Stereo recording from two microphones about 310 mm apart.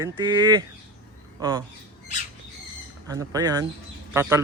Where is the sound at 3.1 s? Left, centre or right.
Centre.